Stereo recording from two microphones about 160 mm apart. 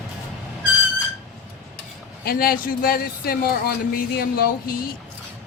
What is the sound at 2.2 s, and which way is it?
A man's voice, 70° left (ahead or behind).